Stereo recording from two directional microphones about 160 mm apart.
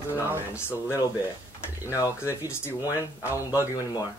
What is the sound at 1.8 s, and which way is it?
Speech, 20° left (ahead or behind).